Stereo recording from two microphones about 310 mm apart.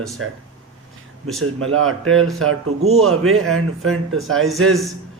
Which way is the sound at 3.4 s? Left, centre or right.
Centre.